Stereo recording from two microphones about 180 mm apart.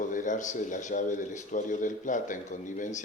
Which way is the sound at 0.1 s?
45° left (ahead or behind).